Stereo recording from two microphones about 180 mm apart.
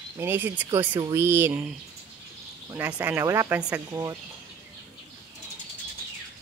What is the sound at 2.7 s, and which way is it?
Speech, 10° right (ahead or behind).